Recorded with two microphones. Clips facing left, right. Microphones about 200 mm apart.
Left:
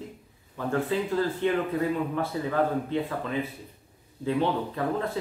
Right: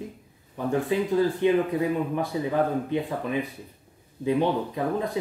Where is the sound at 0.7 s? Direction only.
15° right (ahead or behind).